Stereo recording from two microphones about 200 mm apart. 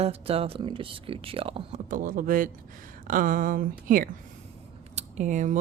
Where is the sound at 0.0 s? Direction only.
30° right (ahead or behind).